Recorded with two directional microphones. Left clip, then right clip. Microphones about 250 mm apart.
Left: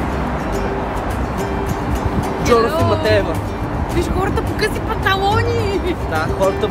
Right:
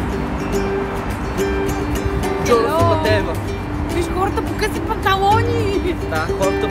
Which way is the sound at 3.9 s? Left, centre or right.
Centre.